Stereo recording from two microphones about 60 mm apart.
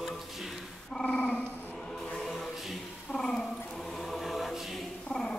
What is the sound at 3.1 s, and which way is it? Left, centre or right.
Dog, centre.